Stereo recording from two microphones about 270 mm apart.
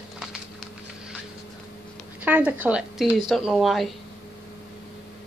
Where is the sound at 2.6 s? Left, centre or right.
Centre.